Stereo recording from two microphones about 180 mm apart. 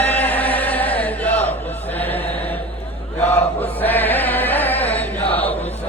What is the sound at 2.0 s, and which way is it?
Chant, 10° left (ahead or behind).